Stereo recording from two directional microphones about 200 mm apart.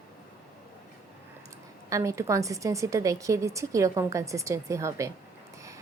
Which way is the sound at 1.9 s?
15° right (ahead or behind).